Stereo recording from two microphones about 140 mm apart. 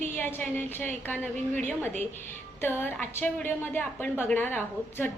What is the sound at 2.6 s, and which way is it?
A woman's voice, 15° left (ahead or behind).